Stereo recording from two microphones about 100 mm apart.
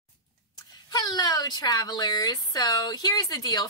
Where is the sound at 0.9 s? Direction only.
40° left (ahead or behind).